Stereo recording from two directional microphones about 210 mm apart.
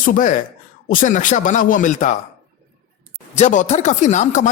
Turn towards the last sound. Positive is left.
turn(degrees=35)  # may be behind; listen again after turning